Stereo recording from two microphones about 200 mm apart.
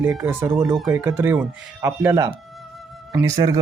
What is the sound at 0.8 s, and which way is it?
Speech, 10° right (ahead or behind).